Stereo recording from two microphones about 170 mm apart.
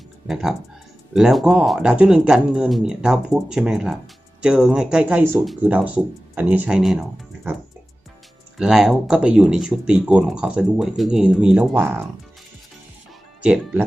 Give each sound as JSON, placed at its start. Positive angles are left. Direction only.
{"t": 1.1, "sound": "speech", "side_deg": 0}
{"t": 8.5, "sound": "speech", "side_deg": -5}
{"t": 13.4, "sound": "speech", "side_deg": -5}